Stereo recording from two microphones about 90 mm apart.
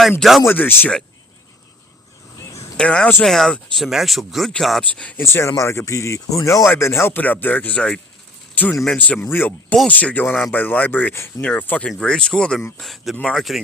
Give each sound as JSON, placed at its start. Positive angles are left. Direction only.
{"t": 0.2, "sound": "speech", "side_deg": 0}
{"t": 0.4, "sound": "speech", "side_deg": 20}
{"t": 2.7, "sound": "speech", "side_deg": 10}
{"t": 4.8, "sound": "speech", "side_deg": 15}
{"t": 5.2, "sound": "speech", "side_deg": 30}